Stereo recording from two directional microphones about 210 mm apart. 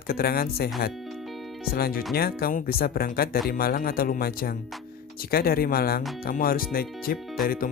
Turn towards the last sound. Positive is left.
turn(degrees=45)  # may be behind; listen again after turning